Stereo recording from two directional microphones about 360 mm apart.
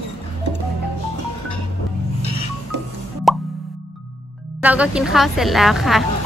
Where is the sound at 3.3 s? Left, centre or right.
Centre.